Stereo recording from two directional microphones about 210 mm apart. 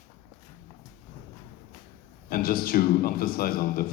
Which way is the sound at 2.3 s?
45° left (ahead or behind).